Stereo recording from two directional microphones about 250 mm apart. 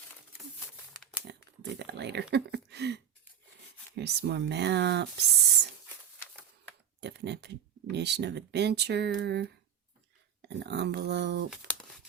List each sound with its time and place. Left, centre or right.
1.3 s speech: right
7.0 s speech: right
10.5 s speech: right